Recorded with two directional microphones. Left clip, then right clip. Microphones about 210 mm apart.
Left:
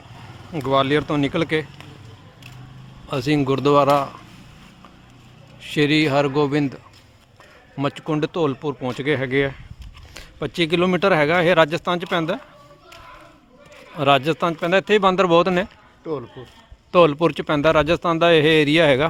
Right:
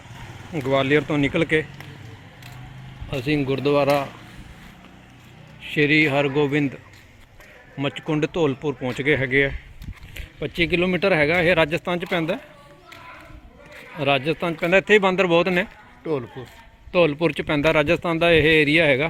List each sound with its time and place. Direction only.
0.7 s speech: 15° left (ahead or behind)
3.1 s speech: 30° left (ahead or behind)
3.8 s speech: 15° left (ahead or behind)
5.7 s speech: 25° left (ahead or behind)
8.0 s speech: 15° left (ahead or behind)
14.0 s speech: 20° left (ahead or behind)
14.6 s speech: 5° left (ahead or behind)
16.1 s speech: 50° right (ahead or behind)
16.9 s speech: 20° left (ahead or behind)